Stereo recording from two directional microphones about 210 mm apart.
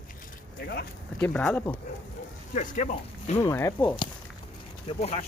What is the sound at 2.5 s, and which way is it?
Speech, 35° left (ahead or behind).